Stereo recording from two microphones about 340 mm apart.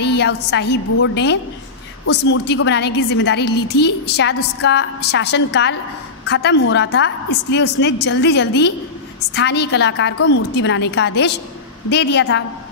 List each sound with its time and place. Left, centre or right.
0.0 s a woman's voice: left